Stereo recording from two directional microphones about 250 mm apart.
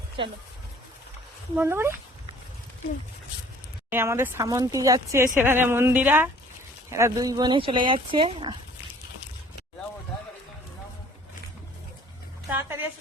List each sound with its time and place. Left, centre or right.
0.2 s speech: right
1.5 s speech: centre
3.8 s speech: centre
12.5 s a sound: centre